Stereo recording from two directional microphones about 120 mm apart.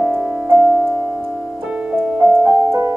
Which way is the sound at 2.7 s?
25° right (ahead or behind).